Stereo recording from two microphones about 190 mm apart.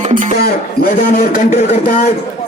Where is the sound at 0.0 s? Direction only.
40° right (ahead or behind).